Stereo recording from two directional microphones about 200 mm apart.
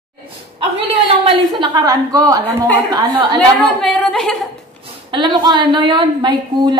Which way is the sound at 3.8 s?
Centre (ahead or behind).